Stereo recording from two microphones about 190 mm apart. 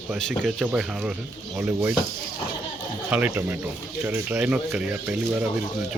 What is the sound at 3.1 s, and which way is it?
Speech, 10° right (ahead or behind).